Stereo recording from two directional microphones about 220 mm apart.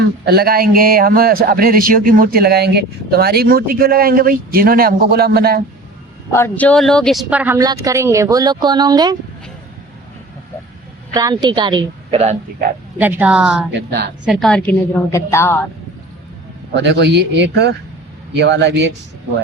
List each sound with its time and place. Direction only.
0.3 s a man's voice: 45° right (ahead or behind)
6.3 s speech: 10° left (ahead or behind); by 9.1 s 20° right (ahead or behind)
11.1 s a woman's voice: 15° right (ahead or behind)
13.0 s speech: 10° right (ahead or behind)
13.7 s a man's voice: 45° right (ahead or behind)
14.3 s a woman's voice: centre (ahead or behind)
16.7 s a man's voice: 50° right (ahead or behind)